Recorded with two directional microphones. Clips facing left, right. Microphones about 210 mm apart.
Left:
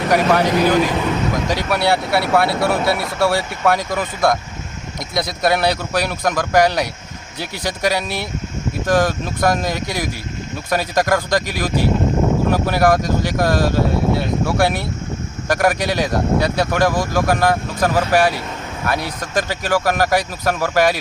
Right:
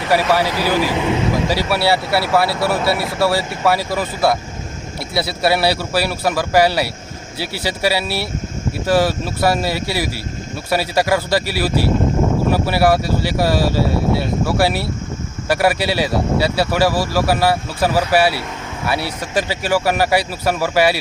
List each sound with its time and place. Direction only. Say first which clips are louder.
0.1 s speech: left 1 dB; 5° right (ahead or behind)